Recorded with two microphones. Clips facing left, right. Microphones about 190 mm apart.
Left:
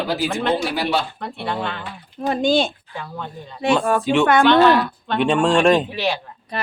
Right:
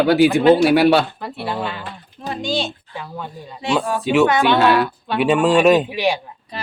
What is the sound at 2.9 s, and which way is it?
A woman's voice, 5° right (ahead or behind).